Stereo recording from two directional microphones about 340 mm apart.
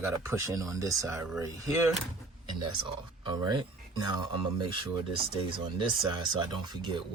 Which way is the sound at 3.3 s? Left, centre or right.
Centre.